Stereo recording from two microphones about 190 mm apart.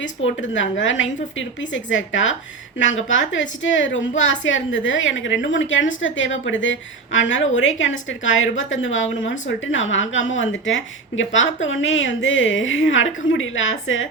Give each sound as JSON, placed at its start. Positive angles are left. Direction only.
{"t": 0.0, "sound": "a woman's voice", "side_deg": 80}